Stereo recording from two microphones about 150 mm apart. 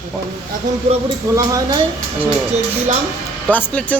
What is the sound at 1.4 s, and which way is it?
Speech, 20° right (ahead or behind).